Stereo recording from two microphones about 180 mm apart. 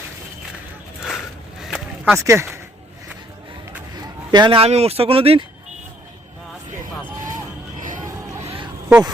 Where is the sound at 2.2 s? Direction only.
15° right (ahead or behind).